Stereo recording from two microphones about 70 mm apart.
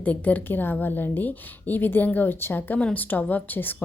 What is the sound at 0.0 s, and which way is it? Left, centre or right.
A woman's voice, left.